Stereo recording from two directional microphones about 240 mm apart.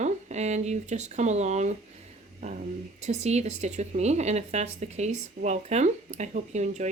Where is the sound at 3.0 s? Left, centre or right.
Right.